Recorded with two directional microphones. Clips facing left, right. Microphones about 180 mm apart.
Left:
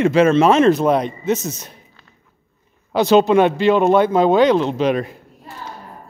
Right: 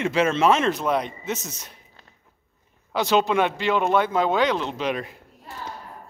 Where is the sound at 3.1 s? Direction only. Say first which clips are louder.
Left 8 dB; 35° left (ahead or behind).